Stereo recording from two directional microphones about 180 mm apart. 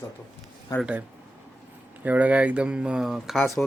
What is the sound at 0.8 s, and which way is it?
Speech, 5° right (ahead or behind).